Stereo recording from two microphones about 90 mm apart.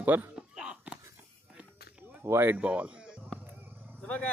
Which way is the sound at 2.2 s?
25° right (ahead or behind).